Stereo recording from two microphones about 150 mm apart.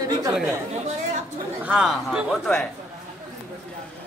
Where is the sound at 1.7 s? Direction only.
5° right (ahead or behind).